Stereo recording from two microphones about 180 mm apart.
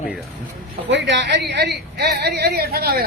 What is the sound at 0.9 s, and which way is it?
A woman's voice, 80° right.